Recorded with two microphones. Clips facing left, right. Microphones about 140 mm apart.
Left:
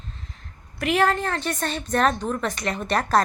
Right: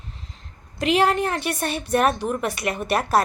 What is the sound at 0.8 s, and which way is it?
A woman's voice, 15° right (ahead or behind).